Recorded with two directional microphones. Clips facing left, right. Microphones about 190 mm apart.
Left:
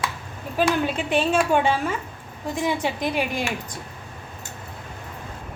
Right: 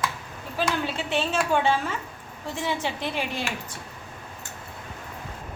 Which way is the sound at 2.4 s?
15° left (ahead or behind).